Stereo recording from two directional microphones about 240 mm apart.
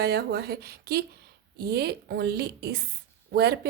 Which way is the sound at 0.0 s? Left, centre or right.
Right.